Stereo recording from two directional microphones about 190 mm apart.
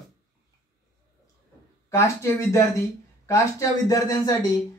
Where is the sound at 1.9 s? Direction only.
15° left (ahead or behind).